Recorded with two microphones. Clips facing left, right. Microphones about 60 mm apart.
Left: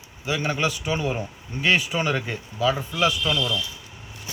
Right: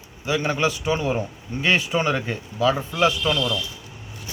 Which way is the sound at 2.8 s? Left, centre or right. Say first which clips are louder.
Right 2 dB; centre.